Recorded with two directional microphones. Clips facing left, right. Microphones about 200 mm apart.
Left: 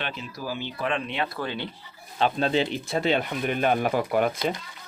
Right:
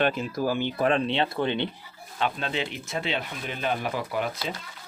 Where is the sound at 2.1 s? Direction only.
35° left (ahead or behind).